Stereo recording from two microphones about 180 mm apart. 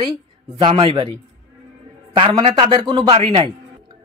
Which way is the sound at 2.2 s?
30° right (ahead or behind).